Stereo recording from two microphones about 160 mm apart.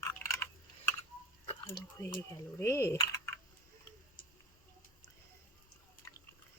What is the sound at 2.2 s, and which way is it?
Speech, 15° left (ahead or behind).